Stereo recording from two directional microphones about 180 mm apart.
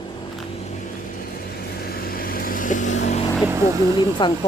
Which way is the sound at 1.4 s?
55° left (ahead or behind).